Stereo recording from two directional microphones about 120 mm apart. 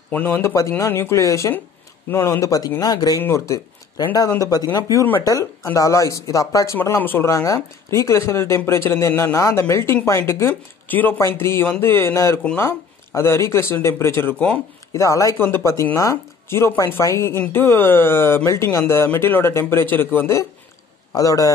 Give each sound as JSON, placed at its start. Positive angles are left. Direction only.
{"t": 0.1, "sound": "speech", "side_deg": 15}
{"t": 3.2, "sound": "speech", "side_deg": 20}
{"t": 7.2, "sound": "speech", "side_deg": 25}
{"t": 14.9, "sound": "speech", "side_deg": 25}